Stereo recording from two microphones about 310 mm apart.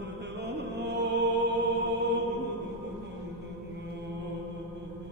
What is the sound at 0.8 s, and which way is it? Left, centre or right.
Music, right.